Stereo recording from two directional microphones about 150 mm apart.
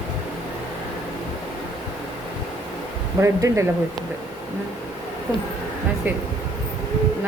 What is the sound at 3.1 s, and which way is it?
Speech, 20° right (ahead or behind).